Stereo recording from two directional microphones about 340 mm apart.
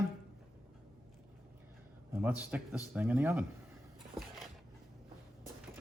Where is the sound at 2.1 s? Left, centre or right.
Centre.